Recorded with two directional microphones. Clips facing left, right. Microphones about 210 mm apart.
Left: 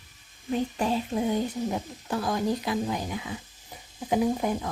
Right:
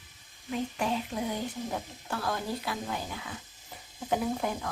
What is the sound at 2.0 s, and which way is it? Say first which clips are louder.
Speech: left 6 dB; 15° left (ahead or behind).